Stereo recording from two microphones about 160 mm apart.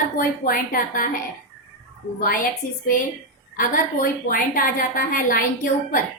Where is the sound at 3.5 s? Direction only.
60° left (ahead or behind).